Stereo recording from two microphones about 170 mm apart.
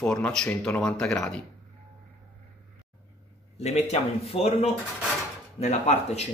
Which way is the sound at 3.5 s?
40° left (ahead or behind).